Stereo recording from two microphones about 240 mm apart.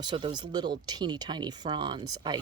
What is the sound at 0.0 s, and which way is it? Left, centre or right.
Speech, centre.